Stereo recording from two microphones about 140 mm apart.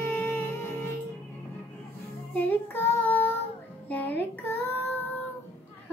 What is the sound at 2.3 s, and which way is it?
Child singing, 10° left (ahead or behind).